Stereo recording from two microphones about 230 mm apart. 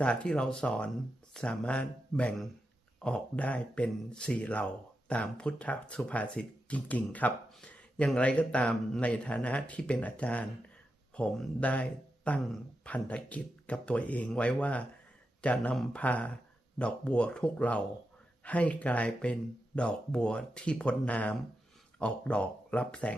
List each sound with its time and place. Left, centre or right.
0.0 s speech: centre